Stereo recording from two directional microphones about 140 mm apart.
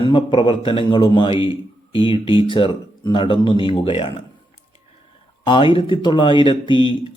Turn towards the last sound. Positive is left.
turn(degrees=35)  # may be behind; listen again after turning